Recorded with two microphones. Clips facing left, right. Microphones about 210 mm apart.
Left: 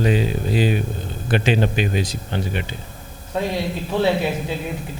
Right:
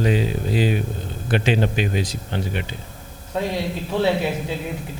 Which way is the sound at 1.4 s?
15° left (ahead or behind).